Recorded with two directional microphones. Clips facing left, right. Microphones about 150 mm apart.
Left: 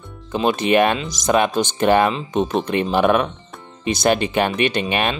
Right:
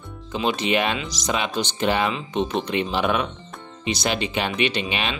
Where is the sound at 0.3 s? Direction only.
50° left (ahead or behind).